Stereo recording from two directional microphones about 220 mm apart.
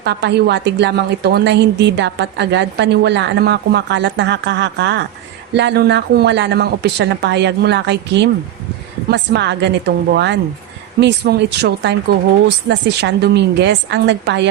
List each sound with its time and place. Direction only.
0.0 s a woman's voice: 50° right (ahead or behind)